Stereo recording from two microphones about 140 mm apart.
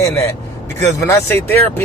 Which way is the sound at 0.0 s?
20° left (ahead or behind).